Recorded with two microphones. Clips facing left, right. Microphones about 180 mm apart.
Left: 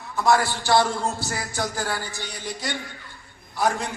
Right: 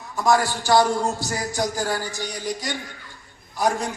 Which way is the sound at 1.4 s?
15° right (ahead or behind).